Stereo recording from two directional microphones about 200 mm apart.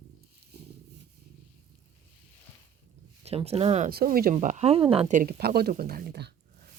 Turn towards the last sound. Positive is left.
turn(degrees=-55)  # may be behind; listen again after turning